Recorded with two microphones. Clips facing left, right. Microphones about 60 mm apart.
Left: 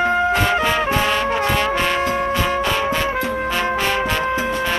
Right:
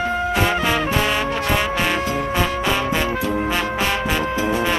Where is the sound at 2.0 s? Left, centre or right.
Left.